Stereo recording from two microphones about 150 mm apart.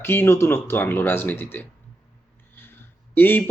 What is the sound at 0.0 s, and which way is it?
Speech, 15° left (ahead or behind).